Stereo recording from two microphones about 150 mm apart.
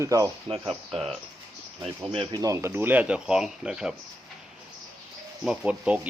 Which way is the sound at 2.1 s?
35° right (ahead or behind).